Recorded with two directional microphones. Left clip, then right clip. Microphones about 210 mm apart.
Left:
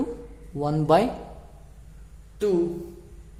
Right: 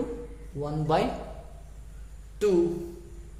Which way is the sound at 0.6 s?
35° left (ahead or behind).